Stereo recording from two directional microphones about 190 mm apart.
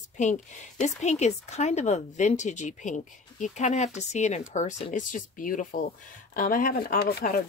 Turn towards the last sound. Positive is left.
turn(degrees=50)  # may be behind; listen again after turning